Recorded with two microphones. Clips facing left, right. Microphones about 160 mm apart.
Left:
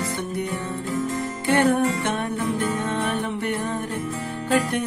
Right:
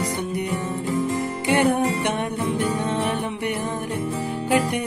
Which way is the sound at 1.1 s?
15° right (ahead or behind).